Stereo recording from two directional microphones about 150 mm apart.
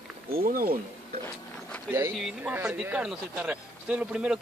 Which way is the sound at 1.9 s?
15° right (ahead or behind).